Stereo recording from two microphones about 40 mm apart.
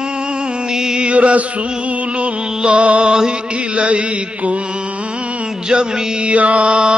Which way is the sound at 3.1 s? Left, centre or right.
Right.